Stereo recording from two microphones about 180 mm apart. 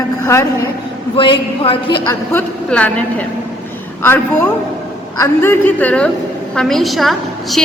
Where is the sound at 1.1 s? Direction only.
30° left (ahead or behind).